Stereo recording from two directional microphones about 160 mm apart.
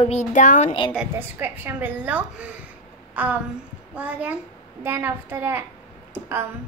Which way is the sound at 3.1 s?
10° right (ahead or behind).